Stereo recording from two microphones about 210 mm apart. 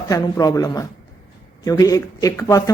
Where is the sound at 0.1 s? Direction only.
15° left (ahead or behind).